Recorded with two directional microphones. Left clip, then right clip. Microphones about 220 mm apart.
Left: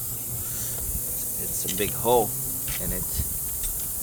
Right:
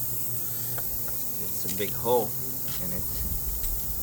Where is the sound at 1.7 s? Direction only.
55° left (ahead or behind).